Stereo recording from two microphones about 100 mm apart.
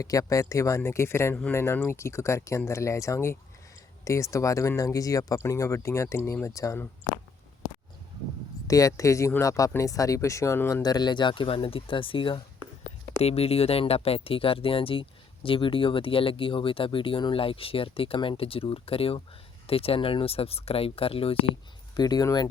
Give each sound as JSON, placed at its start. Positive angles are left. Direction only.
{"t": 0.0, "sound": "speech", "side_deg": 35}
{"t": 8.6, "sound": "speech", "side_deg": 35}
{"t": 10.8, "sound": "speech", "side_deg": 45}
{"t": 11.4, "sound": "speech", "side_deg": 65}
{"t": 12.8, "sound": "speech", "side_deg": 90}
{"t": 21.9, "sound": "speech", "side_deg": 40}